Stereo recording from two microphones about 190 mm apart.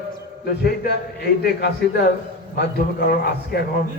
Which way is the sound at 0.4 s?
55° left (ahead or behind).